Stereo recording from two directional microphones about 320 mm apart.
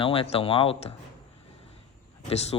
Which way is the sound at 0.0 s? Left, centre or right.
Centre.